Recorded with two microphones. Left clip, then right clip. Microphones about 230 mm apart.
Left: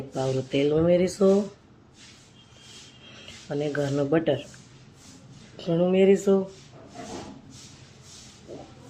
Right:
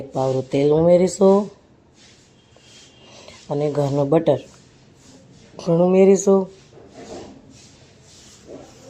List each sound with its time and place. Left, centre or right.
0.1 s speech: right
3.5 s speech: right
5.5 s speech: right